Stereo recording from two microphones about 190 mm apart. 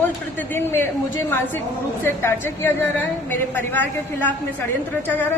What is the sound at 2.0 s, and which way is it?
A woman's voice, 10° left (ahead or behind).